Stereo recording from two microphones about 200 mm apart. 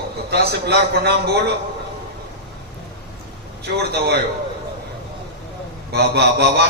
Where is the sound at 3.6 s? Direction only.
55° right (ahead or behind).